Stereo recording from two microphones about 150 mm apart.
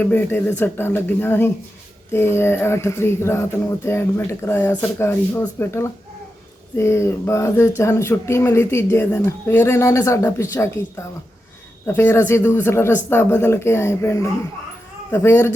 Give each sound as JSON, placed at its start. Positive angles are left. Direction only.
{"t": 0.0, "sound": "speech", "side_deg": 15}